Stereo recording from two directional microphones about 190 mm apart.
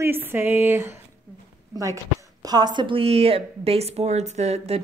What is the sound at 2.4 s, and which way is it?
A woman's voice, 20° right (ahead or behind).